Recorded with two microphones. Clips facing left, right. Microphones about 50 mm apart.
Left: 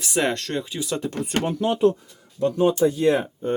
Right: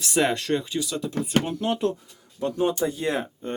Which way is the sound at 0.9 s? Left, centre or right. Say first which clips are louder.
Left 3 dB; left.